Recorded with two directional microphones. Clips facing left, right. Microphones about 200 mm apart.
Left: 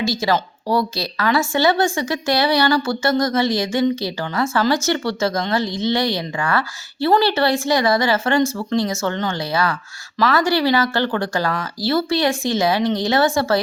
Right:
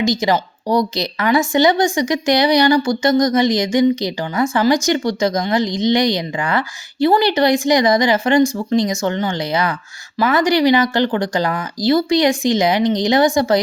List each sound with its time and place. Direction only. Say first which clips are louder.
0.0 s a woman's voice: right 3 dB; 15° right (ahead or behind)